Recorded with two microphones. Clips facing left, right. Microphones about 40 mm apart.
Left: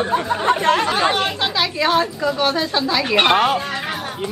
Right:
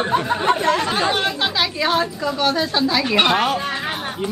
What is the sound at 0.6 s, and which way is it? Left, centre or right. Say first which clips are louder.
Speech: left 2 dB; left.